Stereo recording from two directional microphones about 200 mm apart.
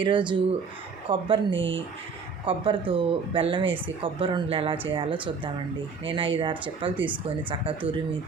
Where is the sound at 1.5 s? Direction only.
65° right (ahead or behind).